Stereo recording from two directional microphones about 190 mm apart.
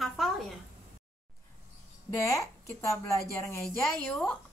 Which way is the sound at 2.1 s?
15° left (ahead or behind).